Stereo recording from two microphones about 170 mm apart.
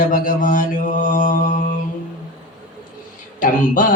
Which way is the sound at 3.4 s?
50° left (ahead or behind).